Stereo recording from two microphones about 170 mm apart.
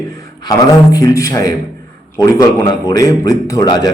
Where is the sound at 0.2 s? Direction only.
20° left (ahead or behind).